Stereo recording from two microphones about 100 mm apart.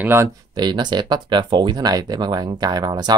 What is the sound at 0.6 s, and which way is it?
Speech, 45° right (ahead or behind).